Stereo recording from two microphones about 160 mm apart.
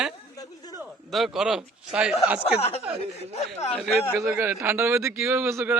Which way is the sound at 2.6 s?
40° left (ahead or behind).